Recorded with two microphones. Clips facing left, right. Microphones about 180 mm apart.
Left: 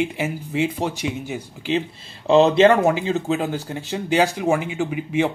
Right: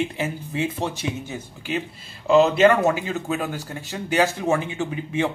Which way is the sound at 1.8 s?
30° left (ahead or behind).